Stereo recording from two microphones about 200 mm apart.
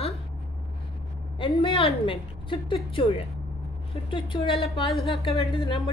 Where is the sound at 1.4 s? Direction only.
30° left (ahead or behind).